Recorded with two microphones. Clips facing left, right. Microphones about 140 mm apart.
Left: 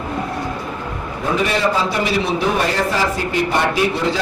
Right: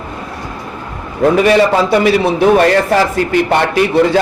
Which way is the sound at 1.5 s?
70° right (ahead or behind).